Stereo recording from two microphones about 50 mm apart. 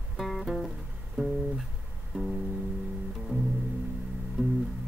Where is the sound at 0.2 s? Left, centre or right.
Centre.